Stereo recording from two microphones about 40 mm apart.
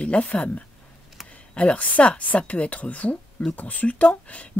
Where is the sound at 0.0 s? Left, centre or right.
Left.